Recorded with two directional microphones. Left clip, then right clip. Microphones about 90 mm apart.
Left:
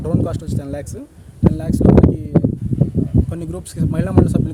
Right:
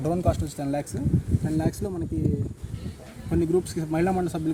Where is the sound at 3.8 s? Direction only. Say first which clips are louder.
Left 6 dB; 75° left (ahead or behind).